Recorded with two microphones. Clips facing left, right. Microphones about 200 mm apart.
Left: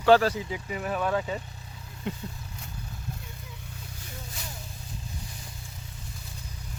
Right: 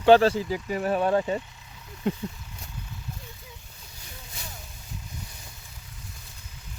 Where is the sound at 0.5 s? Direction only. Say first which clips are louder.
Right 5 dB; 40° right (ahead or behind).